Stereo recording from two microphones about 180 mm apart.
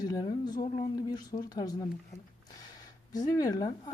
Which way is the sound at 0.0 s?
20° left (ahead or behind).